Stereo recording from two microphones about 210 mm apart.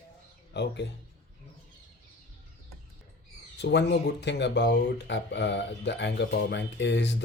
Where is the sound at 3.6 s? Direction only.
55° left (ahead or behind).